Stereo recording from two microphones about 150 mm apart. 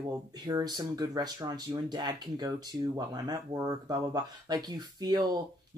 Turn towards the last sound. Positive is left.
turn(degrees=-25)  # may be behind; listen again after turning